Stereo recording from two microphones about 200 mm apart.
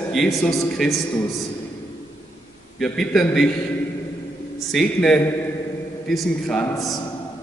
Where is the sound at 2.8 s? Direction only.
Centre (ahead or behind).